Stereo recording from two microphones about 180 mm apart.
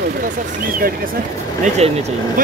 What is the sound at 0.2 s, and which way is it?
Speech, 50° right (ahead or behind).